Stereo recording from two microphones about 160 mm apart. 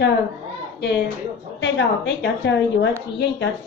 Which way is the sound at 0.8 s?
85° left.